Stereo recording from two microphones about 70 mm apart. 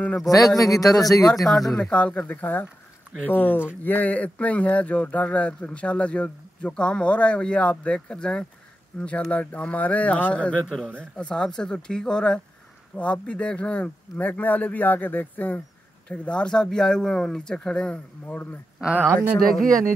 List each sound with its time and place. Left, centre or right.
0.3 s speech: left
1.3 s speech: centre
1.9 s speech: centre
18.2 s speech: left
18.9 s speech: right